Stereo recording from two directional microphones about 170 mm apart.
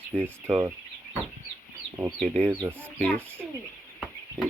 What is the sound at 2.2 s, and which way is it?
Speech, 5° left (ahead or behind).